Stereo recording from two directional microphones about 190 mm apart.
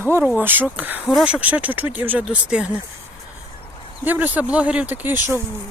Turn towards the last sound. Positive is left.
turn(degrees=-10)  # may be behind; listen again after turning